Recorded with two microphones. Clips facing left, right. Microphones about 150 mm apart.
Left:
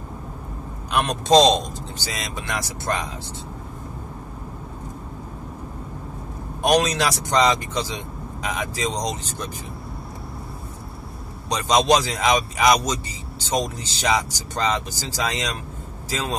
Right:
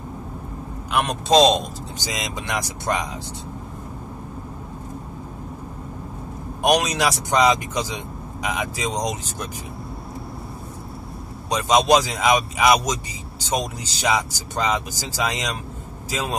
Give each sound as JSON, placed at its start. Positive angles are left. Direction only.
{"t": 0.9, "sound": "a man's voice", "side_deg": -5}
{"t": 2.0, "sound": "speech", "side_deg": -15}
{"t": 6.6, "sound": "speech", "side_deg": -10}
{"t": 11.4, "sound": "speech", "side_deg": -10}